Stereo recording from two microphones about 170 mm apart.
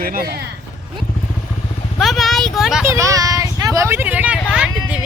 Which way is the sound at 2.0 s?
Centre (ahead or behind).